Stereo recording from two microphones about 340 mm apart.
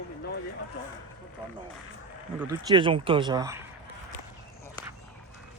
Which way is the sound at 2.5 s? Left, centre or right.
Centre.